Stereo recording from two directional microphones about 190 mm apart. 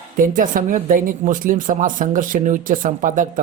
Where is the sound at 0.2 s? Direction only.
45° right (ahead or behind).